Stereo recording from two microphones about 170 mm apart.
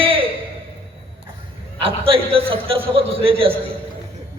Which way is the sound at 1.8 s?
35° right (ahead or behind).